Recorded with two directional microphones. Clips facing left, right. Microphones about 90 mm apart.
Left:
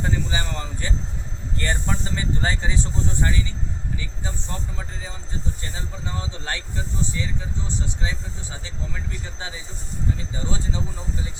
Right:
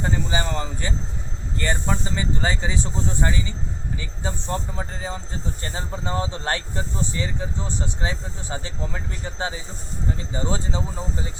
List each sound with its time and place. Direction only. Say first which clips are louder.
0.0 s a sound: right 2 dB; 25° right (ahead or behind)
1.5 s speech: right 2 dB; 10° right (ahead or behind)
3.1 s speech: right 2 dB; 15° right (ahead or behind)
4.3 s speech: right 8 dB; 35° right (ahead or behind)